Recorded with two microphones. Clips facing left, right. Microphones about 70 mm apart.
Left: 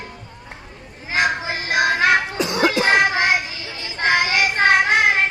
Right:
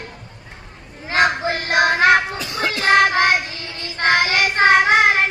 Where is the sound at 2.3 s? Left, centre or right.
Centre.